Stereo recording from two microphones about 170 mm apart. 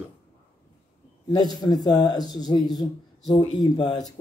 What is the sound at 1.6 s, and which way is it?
Speech, 25° left (ahead or behind).